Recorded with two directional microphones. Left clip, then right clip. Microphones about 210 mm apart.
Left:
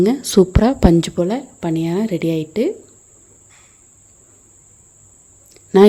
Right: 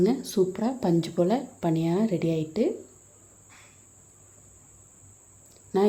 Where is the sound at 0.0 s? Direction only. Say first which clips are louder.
Left 10 dB; 35° left (ahead or behind).